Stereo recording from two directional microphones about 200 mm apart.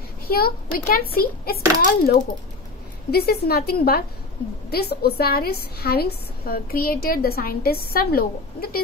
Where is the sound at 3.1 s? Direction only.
50° left (ahead or behind).